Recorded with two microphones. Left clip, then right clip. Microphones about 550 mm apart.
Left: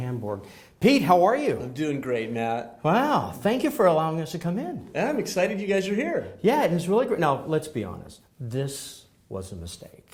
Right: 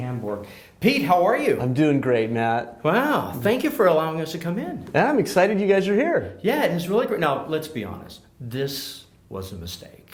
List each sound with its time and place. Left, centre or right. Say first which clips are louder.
0.8 s speech: even; left
1.7 s speech: right 7 dB; right
2.8 s speech: right 1 dB; left
4.9 s speech: right 7 dB; right
6.4 s speech: even; left